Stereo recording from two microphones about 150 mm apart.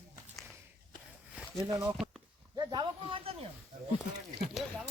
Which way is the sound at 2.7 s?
35° right (ahead or behind).